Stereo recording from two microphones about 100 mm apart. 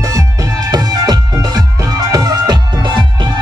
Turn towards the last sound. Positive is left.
turn(degrees=-45)  # may be behind; listen again after turning